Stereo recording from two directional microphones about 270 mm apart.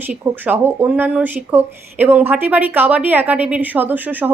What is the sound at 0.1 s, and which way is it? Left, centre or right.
Speech, centre.